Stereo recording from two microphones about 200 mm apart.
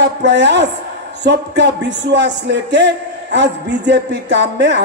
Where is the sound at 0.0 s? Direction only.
60° right (ahead or behind).